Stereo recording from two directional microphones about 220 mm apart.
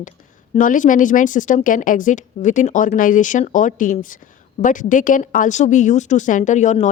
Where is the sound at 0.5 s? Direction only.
35° left (ahead or behind).